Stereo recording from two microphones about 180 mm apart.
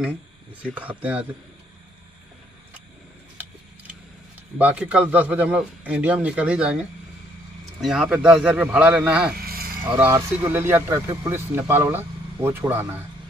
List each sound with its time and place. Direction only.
0.7 s a man's voice: 5° right (ahead or behind)
4.6 s a man's voice: 10° right (ahead or behind)
7.8 s a man's voice: 5° right (ahead or behind)
9.4 s a sound: 55° right (ahead or behind)
9.8 s a man's voice: 10° right (ahead or behind)